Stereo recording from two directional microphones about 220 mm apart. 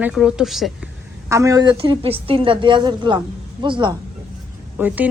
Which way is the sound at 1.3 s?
15° right (ahead or behind).